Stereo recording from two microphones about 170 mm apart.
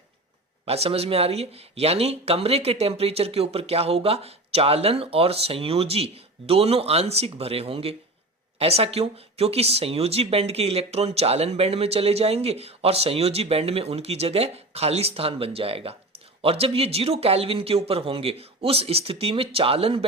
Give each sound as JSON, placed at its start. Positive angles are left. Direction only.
{"t": 0.6, "sound": "speech", "side_deg": -35}